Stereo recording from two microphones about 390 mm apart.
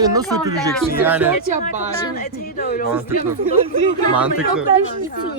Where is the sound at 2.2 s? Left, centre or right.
Left.